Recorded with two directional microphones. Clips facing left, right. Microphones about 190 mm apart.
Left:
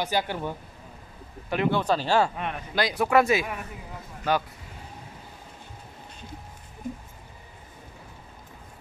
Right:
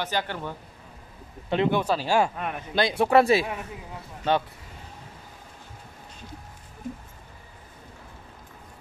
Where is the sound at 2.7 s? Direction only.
25° right (ahead or behind).